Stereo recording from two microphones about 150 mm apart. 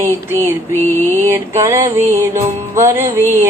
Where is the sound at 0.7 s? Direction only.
15° left (ahead or behind).